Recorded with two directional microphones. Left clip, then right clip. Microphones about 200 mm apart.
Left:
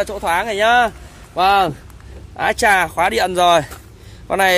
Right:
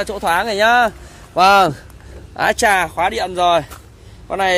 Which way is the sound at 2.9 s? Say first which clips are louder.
Left 2 dB; 20° left (ahead or behind).